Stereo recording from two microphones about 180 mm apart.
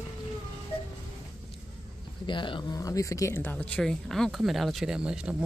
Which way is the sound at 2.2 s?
25° left (ahead or behind).